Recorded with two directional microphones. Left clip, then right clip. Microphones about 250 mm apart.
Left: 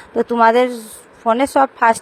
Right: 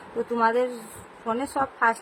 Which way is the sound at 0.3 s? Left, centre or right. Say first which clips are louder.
Left 10 dB; left.